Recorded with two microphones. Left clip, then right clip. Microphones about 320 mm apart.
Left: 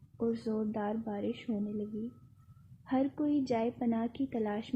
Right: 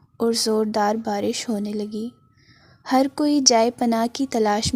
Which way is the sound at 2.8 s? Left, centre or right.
Right.